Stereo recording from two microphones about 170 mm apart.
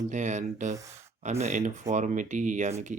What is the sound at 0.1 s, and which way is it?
Speech, 45° right (ahead or behind).